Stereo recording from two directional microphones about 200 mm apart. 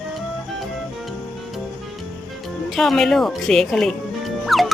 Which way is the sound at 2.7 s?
Centre (ahead or behind).